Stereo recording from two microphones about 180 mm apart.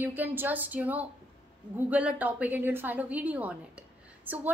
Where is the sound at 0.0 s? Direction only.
10° right (ahead or behind).